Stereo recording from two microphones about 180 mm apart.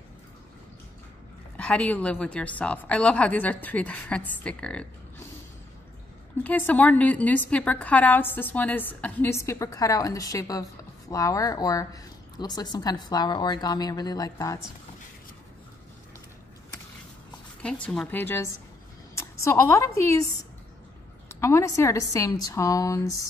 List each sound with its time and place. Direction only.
1.6 s a woman's voice: 10° left (ahead or behind)
6.4 s a woman's voice: 10° left (ahead or behind)
17.6 s a woman's voice: 5° left (ahead or behind)
21.3 s a woman's voice: 15° left (ahead or behind)